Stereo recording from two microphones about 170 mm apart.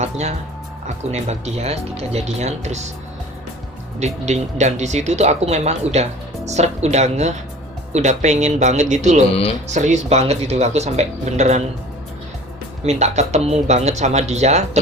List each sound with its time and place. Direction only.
0.0 s speech: 40° right (ahead or behind)
4.0 s speech: 45° right (ahead or behind)
9.3 s speech: 35° left (ahead or behind)
9.6 s speech: 45° right (ahead or behind)
12.8 s speech: 40° right (ahead or behind)